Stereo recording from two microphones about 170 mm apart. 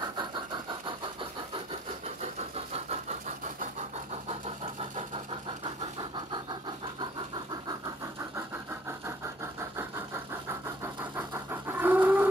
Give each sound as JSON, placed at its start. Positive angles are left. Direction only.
{"t": 0.0, "sound": "vehicle", "side_deg": -25}
{"t": 2.5, "sound": "vehicle", "side_deg": -40}
{"t": 4.9, "sound": "vehicle", "side_deg": -30}
{"t": 9.0, "sound": "engine", "side_deg": -15}
{"t": 10.8, "sound": "pant", "side_deg": -15}